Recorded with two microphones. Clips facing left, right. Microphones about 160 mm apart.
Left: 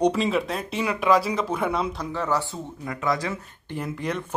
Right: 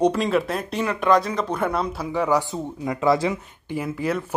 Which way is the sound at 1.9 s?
10° right (ahead or behind).